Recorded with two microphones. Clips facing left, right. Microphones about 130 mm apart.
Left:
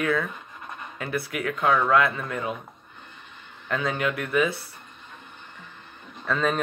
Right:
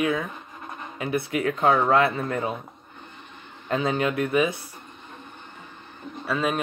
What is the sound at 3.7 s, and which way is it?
Speech, 25° right (ahead or behind).